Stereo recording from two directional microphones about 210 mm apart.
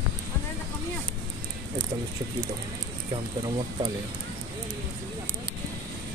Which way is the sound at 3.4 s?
25° right (ahead or behind).